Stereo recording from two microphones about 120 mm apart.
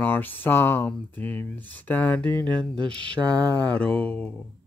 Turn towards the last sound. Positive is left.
turn(degrees=10)  # may be behind; listen again after turning